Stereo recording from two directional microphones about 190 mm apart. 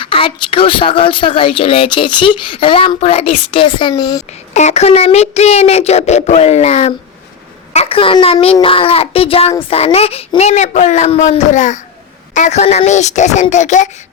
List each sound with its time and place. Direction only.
0.0 s speech: 30° left (ahead or behind)
4.5 s a child's voice: 35° left (ahead or behind)